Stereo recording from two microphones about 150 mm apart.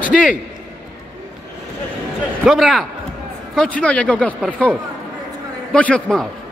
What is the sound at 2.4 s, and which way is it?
A man's voice, centre (ahead or behind).